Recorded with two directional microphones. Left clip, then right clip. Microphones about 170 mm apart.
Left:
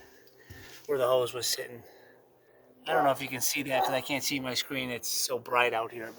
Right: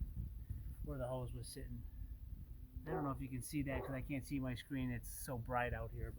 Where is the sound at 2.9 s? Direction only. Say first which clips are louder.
Left 18 dB; 25° left (ahead or behind).